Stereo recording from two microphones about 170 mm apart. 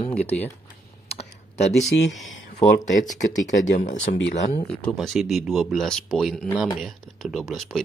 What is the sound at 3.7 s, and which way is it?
Speech, 45° left (ahead or behind).